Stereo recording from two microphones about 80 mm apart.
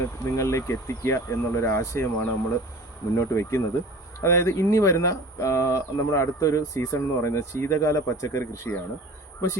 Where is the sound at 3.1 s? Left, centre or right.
Left.